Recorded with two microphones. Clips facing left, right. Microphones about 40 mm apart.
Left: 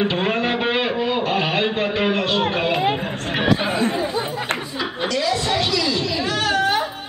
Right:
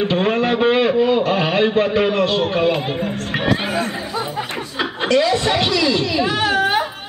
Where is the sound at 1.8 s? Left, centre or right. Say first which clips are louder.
Right 4 dB; left.